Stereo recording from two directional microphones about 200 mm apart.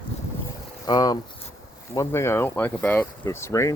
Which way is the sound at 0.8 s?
20° left (ahead or behind).